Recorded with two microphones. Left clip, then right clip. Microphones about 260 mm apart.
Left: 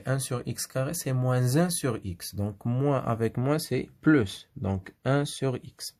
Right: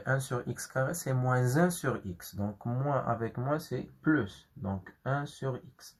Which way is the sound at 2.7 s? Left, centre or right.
Left.